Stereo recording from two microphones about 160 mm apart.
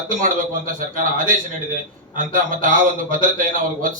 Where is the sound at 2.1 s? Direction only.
55° right (ahead or behind).